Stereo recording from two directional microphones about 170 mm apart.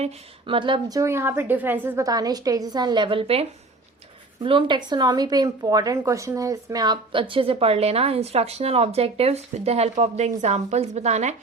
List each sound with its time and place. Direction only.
0.0 s a woman's voice: 30° right (ahead or behind)
4.4 s speech: 30° right (ahead or behind)